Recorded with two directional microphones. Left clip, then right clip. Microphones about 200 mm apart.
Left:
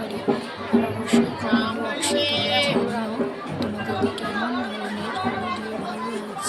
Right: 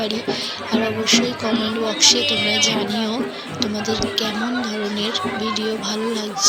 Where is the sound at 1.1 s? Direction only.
15° right (ahead or behind).